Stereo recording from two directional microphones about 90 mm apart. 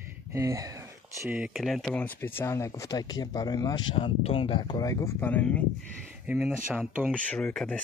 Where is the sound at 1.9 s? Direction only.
20° left (ahead or behind).